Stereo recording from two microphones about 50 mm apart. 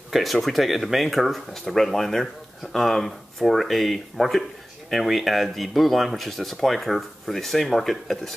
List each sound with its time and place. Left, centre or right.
0.1 s speech: centre